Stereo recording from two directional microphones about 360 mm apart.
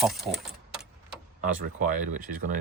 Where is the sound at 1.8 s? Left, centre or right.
Right.